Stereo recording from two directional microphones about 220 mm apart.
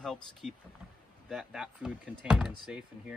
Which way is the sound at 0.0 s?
Centre (ahead or behind).